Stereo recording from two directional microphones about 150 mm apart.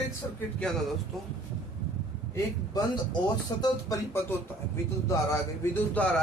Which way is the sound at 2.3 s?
25° left (ahead or behind).